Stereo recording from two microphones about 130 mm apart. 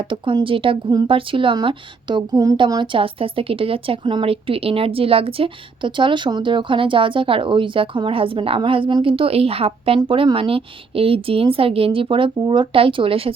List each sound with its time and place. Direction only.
0.0 s a woman's voice: 40° right (ahead or behind)